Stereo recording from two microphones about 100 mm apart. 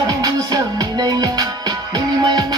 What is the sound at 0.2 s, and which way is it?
Music, 40° right (ahead or behind).